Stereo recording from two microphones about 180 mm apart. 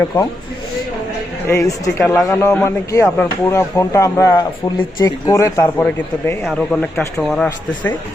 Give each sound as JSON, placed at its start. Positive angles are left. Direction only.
{"t": 0.1, "sound": "speech", "side_deg": 10}
{"t": 1.5, "sound": "speech", "side_deg": 15}
{"t": 6.4, "sound": "speech", "side_deg": 0}